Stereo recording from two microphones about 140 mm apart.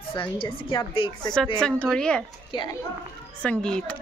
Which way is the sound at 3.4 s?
5° left (ahead or behind).